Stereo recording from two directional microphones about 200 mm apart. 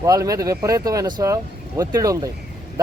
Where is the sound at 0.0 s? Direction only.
15° right (ahead or behind).